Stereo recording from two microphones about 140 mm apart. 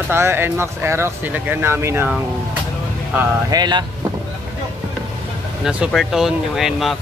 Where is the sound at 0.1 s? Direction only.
15° right (ahead or behind).